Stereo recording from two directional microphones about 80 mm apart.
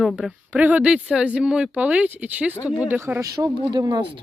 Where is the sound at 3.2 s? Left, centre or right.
Right.